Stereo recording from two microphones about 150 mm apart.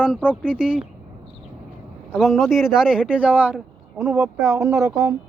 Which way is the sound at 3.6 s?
Centre (ahead or behind).